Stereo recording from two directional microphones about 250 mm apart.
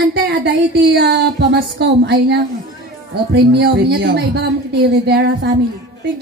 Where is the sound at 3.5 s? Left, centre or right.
Right.